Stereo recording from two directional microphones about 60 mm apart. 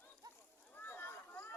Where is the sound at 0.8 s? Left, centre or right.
Left.